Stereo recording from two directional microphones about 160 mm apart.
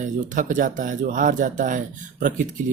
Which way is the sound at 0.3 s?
55° right (ahead or behind).